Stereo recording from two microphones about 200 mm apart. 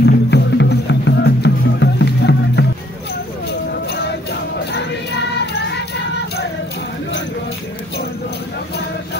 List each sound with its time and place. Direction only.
0.0 s music: 55° left (ahead or behind)